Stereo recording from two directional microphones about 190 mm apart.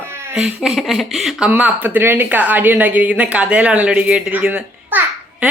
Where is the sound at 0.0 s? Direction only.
10° right (ahead or behind).